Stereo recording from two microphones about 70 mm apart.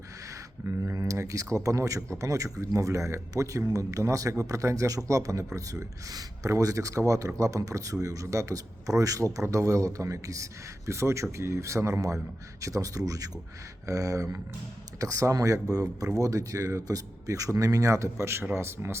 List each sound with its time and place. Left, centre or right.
0.6 s a man's voice: right